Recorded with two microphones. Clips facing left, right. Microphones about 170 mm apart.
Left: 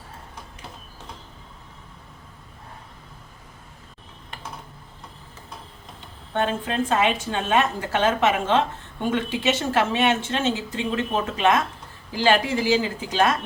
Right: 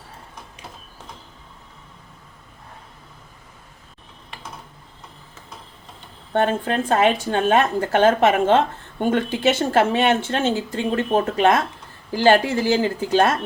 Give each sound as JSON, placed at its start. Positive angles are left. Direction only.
{"t": 6.3, "sound": "speech", "side_deg": -50}